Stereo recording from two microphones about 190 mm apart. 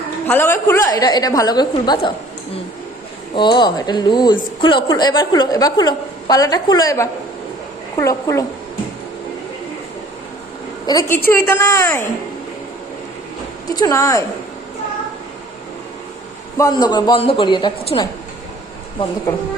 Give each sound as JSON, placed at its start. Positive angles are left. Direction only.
{"t": 0.3, "sound": "a woman's voice", "side_deg": 10}
{"t": 3.3, "sound": "a woman's voice", "side_deg": 25}
{"t": 10.8, "sound": "a woman's voice", "side_deg": 20}
{"t": 13.7, "sound": "a woman's voice", "side_deg": 20}
{"t": 16.6, "sound": "a woman's voice", "side_deg": 20}